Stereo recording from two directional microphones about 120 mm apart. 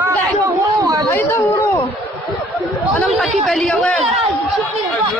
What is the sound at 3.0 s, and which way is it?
Speech, 5° left (ahead or behind).